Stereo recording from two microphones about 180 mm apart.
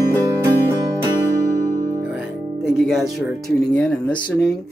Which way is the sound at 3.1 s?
Centre (ahead or behind).